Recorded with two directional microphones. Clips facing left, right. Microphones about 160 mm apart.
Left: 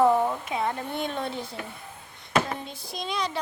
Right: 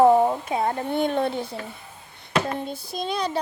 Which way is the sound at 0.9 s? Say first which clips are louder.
Right 8 dB; 50° right (ahead or behind).